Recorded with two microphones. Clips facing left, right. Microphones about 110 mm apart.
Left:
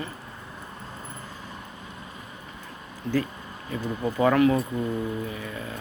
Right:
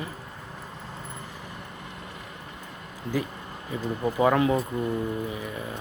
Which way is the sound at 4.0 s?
15° right (ahead or behind).